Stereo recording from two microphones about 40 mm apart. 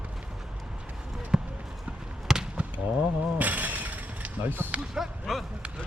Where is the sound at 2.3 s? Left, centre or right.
Centre.